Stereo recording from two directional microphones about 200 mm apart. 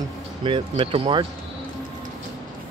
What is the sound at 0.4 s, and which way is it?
Speech, 25° right (ahead or behind).